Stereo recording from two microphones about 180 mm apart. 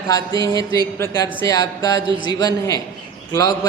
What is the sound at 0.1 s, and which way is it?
Speech, 20° left (ahead or behind).